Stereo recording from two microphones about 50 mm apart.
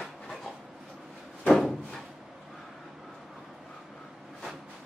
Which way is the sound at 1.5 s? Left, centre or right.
Centre.